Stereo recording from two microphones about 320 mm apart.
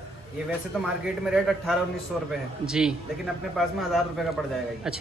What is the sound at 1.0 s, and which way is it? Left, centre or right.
A man's voice, centre.